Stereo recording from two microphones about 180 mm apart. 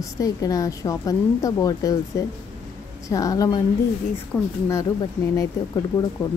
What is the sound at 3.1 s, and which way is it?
Speech, 20° left (ahead or behind).